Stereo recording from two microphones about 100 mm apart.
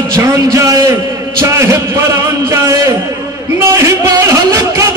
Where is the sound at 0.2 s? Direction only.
30° right (ahead or behind).